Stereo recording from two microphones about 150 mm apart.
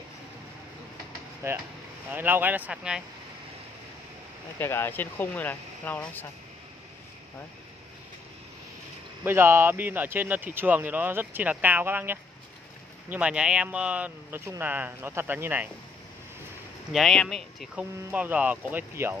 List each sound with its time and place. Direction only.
1.4 s speech: 15° right (ahead or behind)
4.6 s speech: 15° left (ahead or behind)
9.2 s speech: 15° right (ahead or behind)
16.9 s speech: centre (ahead or behind)
17.9 s speech: 10° right (ahead or behind)